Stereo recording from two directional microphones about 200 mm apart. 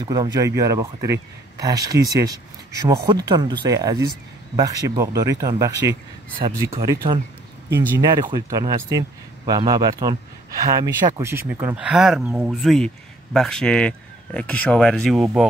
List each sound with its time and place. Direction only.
0.0 s speech: 20° right (ahead or behind); by 15.2 s centre (ahead or behind)